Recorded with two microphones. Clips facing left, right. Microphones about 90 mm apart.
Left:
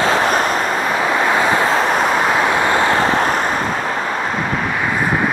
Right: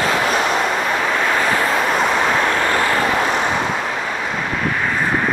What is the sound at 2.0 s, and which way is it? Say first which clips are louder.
Vehicle: left 2 dB; 5° left (ahead or behind).